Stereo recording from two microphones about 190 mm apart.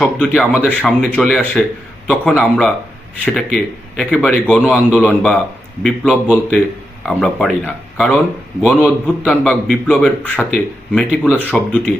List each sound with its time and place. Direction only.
0.0 s a man's voice: 5° left (ahead or behind)